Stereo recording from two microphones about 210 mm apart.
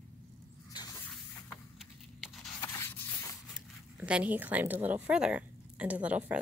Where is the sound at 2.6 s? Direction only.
10° left (ahead or behind).